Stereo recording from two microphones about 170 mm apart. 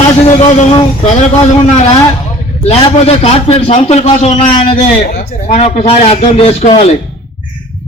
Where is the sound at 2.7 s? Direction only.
35° left (ahead or behind).